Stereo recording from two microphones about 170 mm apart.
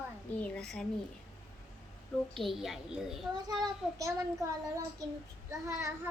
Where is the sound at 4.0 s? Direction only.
20° right (ahead or behind).